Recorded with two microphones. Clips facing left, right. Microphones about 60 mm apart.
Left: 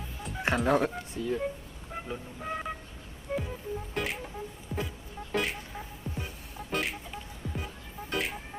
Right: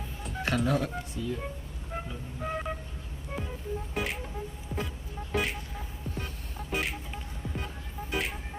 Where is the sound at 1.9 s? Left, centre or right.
Centre.